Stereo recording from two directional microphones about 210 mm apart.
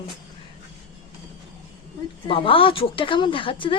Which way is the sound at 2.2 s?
25° left (ahead or behind).